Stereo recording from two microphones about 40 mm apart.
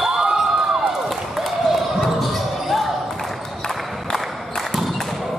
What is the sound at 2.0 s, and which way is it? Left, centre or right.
Basketball bounce, centre.